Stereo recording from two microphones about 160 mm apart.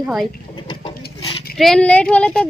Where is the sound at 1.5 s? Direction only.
Centre (ahead or behind).